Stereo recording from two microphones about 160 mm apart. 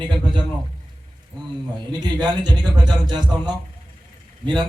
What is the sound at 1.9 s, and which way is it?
Speech, 25° right (ahead or behind).